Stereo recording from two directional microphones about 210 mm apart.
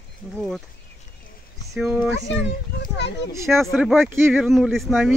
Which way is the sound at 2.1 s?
55° left (ahead or behind).